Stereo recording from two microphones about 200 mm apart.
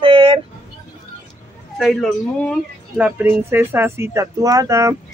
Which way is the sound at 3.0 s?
10° right (ahead or behind).